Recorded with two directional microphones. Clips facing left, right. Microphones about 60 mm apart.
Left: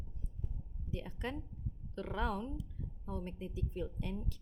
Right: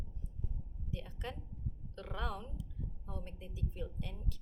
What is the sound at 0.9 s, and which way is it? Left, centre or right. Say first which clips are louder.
A woman's voice: left 4 dB; left.